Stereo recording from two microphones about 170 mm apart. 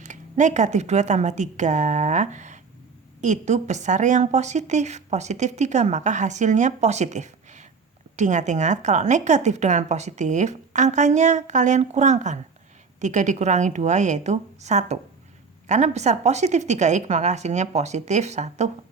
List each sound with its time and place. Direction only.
0.0 s a woman's voice: 45° right (ahead or behind)